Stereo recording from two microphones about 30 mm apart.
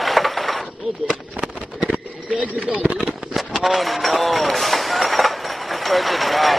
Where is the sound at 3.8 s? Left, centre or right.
Centre.